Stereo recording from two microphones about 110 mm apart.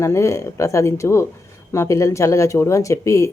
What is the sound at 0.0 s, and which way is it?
Speech, 30° left (ahead or behind).